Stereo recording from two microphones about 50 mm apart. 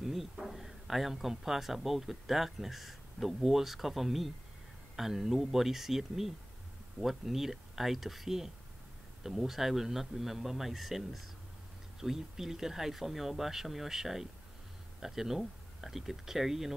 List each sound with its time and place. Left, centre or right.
0.0 s speech: centre